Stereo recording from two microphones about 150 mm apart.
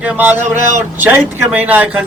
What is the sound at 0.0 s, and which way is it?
Speech, 10° right (ahead or behind).